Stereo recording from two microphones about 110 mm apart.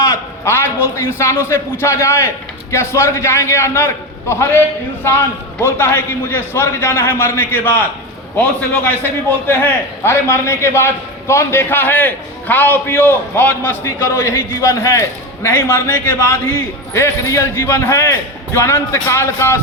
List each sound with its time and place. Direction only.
0.0 s a man's voice: 25° left (ahead or behind)
8.8 s a man's voice: 20° left (ahead or behind)